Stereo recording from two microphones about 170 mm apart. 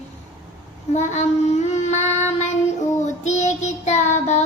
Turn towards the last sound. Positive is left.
turn(degrees=45)  # may be behind; listen again after turning